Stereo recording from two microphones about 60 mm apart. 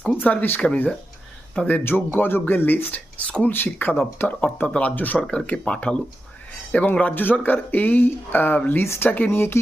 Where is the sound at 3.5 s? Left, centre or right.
Left.